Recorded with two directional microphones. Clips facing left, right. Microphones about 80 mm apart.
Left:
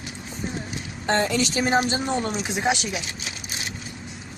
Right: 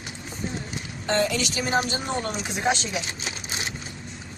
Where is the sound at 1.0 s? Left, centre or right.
Left.